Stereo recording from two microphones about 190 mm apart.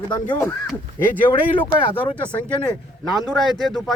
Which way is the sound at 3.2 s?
Centre (ahead or behind).